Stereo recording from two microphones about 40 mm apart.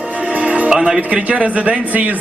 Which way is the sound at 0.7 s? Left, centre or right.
Centre.